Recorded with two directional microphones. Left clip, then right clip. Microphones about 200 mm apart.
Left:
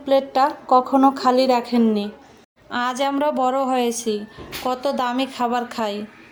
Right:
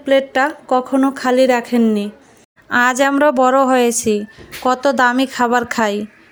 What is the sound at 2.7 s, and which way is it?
A woman's voice, 40° right (ahead or behind).